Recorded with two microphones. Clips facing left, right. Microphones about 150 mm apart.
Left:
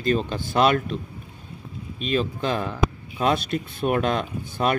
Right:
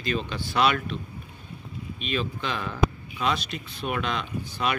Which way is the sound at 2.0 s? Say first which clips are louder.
Left 6 dB; 40° left (ahead or behind).